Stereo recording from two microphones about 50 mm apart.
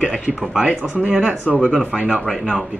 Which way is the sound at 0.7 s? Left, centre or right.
Right.